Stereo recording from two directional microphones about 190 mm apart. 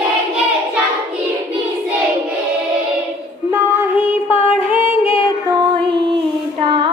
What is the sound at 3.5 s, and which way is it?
Music, 10° right (ahead or behind).